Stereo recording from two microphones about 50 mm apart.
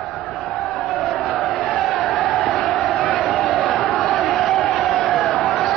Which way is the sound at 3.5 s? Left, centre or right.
Centre.